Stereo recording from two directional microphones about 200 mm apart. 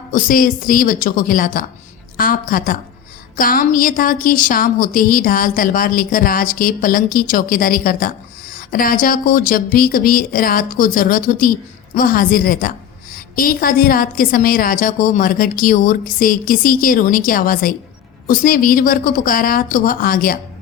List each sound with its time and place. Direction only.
0.1 s a woman's voice: 45° left (ahead or behind)